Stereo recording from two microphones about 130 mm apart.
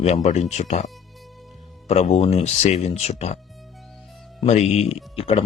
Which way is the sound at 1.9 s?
55° left (ahead or behind).